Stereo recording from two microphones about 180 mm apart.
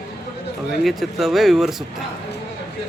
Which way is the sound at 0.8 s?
Centre (ahead or behind).